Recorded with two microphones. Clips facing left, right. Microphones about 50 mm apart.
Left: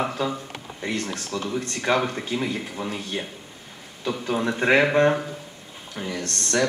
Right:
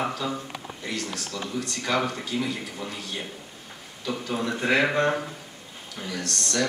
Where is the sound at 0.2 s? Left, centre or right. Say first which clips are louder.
Left 3 dB; left.